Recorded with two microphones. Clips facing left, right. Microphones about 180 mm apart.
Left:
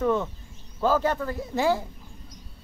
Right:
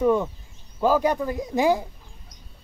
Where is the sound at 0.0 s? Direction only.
10° right (ahead or behind).